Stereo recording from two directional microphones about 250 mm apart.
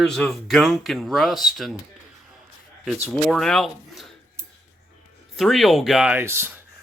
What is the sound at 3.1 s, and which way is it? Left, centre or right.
Speech, centre.